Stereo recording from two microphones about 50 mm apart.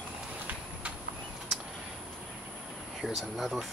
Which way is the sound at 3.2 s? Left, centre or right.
Centre.